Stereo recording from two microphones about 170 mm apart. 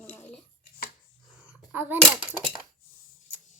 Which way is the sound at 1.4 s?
10° right (ahead or behind).